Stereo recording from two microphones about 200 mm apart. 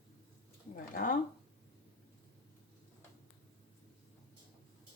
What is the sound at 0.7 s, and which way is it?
Speech, 45° left (ahead or behind).